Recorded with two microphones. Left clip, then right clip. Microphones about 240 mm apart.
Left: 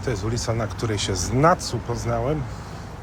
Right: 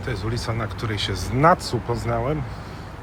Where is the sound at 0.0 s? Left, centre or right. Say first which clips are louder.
Left 2 dB; centre.